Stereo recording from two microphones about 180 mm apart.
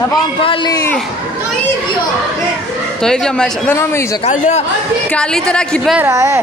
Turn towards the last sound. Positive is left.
turn(degrees=-15)  # may be behind; listen again after turning